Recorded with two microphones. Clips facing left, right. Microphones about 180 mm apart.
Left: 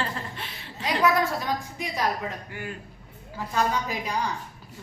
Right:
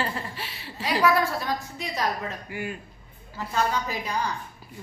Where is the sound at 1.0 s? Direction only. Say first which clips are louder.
Even; 15° left (ahead or behind).